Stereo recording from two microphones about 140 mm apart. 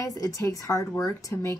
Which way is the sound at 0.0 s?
25° left (ahead or behind).